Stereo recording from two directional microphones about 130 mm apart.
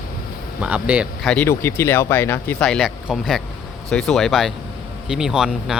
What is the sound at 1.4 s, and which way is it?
Speech, 20° left (ahead or behind).